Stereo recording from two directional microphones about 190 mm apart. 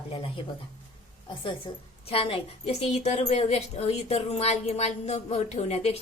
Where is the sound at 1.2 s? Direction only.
25° left (ahead or behind).